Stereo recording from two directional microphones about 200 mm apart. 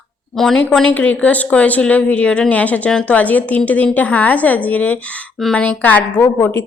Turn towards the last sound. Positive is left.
turn(degrees=15)  # may be behind; listen again after turning